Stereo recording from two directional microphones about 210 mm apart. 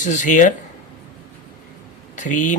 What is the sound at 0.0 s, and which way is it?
Speech, 40° left (ahead or behind).